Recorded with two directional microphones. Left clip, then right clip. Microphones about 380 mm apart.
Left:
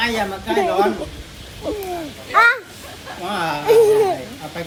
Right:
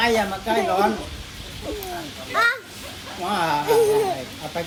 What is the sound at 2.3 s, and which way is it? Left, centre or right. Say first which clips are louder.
Children playing: left 7 dB; left.